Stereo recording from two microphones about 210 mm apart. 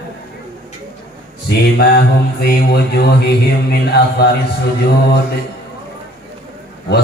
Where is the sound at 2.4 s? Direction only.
50° left (ahead or behind).